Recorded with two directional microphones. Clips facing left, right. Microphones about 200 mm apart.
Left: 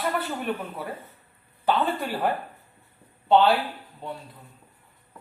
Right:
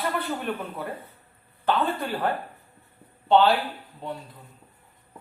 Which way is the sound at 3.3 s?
Centre (ahead or behind).